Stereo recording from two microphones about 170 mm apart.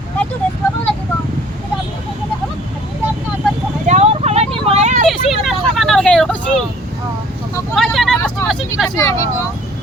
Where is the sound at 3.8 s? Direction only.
40° right (ahead or behind).